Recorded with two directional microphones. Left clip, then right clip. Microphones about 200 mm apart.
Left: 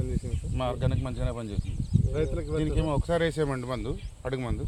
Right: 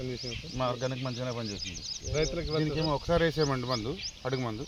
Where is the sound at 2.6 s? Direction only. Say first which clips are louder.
Left 1 dB; 25° left (ahead or behind).